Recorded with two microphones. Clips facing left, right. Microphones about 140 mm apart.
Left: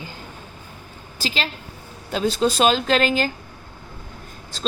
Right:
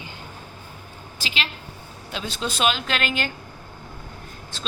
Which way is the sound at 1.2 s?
40° left (ahead or behind).